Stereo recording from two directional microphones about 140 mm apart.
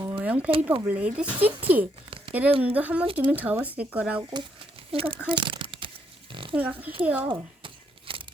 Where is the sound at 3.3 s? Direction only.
10° right (ahead or behind).